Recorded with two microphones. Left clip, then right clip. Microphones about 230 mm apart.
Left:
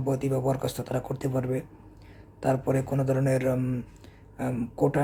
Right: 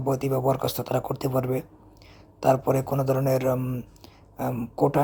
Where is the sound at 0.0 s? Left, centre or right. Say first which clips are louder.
Right 3 dB; centre.